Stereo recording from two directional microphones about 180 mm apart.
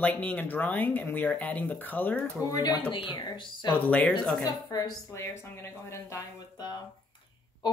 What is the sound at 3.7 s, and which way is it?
Speech, 10° left (ahead or behind).